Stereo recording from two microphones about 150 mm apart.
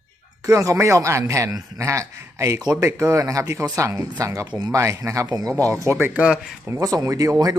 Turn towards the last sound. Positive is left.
turn(degrees=-25)  # may be behind; listen again after turning